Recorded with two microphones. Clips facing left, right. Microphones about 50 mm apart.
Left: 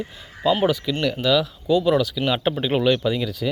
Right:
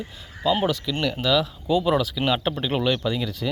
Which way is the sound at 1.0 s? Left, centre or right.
Centre.